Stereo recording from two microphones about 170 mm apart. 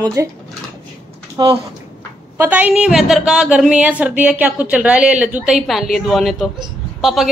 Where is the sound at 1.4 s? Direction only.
25° right (ahead or behind).